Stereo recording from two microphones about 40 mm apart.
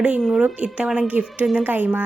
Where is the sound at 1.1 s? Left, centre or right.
Right.